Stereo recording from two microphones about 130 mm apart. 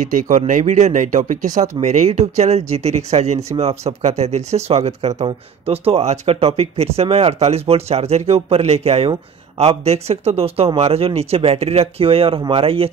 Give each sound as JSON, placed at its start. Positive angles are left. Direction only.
{"t": 0.0, "sound": "speech", "side_deg": -90}
{"t": 0.5, "sound": "speech", "side_deg": -75}
{"t": 1.8, "sound": "speech", "side_deg": -60}